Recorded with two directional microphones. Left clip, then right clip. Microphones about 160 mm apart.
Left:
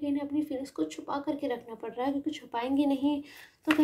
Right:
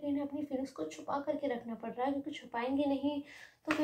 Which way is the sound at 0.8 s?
45° left (ahead or behind).